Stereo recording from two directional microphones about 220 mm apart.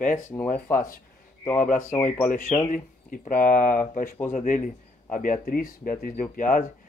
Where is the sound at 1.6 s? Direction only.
35° left (ahead or behind).